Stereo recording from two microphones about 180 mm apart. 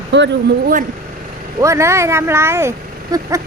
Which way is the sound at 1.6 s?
15° right (ahead or behind).